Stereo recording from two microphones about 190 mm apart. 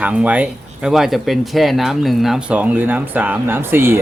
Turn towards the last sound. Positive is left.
turn(degrees=-10)  # may be behind; listen again after turning